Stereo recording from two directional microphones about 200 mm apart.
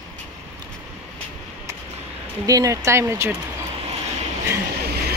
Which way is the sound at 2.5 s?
15° right (ahead or behind).